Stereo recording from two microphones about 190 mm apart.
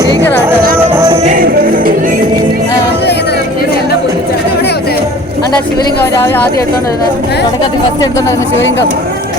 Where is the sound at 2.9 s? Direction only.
60° left (ahead or behind).